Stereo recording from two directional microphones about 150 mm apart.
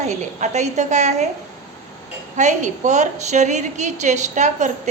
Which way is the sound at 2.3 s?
55° right (ahead or behind).